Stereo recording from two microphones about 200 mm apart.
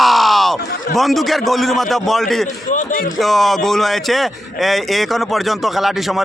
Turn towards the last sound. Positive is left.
turn(degrees=0)  # may be behind; listen again after turning